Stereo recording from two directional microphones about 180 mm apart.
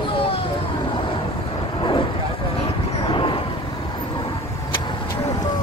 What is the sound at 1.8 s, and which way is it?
Vehicle, 25° left (ahead or behind).